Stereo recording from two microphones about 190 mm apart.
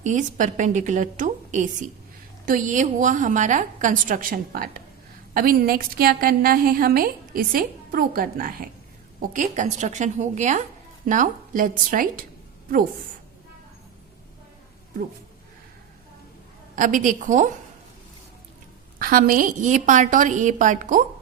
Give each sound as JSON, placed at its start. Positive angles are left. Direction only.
{"t": 0.0, "sound": "a woman's voice", "side_deg": -40}
{"t": 16.7, "sound": "a woman's voice", "side_deg": -45}
{"t": 18.9, "sound": "a woman's voice", "side_deg": -50}